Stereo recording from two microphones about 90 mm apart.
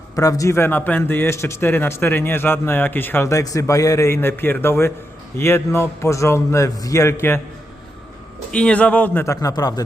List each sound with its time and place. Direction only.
0.2 s a man's voice: 40° left (ahead or behind)
0.5 s a man's voice: 25° left (ahead or behind)
8.5 s speech: 10° left (ahead or behind)
9.2 s a man's voice: 35° left (ahead or behind)
9.5 s speech: 45° left (ahead or behind)